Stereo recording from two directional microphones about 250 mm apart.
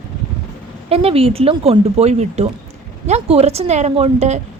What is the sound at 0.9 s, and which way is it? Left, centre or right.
A woman's voice, right.